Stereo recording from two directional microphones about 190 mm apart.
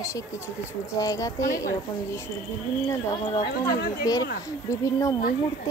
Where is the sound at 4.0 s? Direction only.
20° left (ahead or behind).